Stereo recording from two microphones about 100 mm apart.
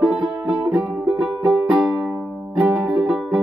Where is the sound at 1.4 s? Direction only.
5° right (ahead or behind).